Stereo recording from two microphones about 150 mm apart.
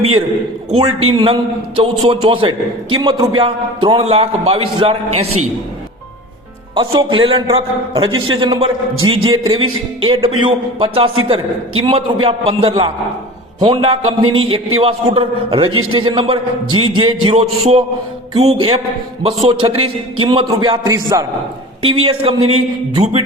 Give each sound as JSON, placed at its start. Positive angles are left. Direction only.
{"t": 0.7, "sound": "a man's voice", "side_deg": -40}
{"t": 6.7, "sound": "a man's voice", "side_deg": -35}
{"t": 21.8, "sound": "a man's voice", "side_deg": -40}